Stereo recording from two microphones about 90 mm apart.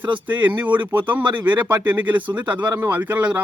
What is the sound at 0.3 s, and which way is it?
Speech, 20° right (ahead or behind).